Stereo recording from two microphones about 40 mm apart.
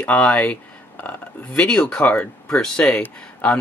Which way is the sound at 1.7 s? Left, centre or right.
Centre.